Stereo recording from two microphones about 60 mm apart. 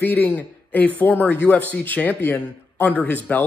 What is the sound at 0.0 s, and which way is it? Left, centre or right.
Speech, left.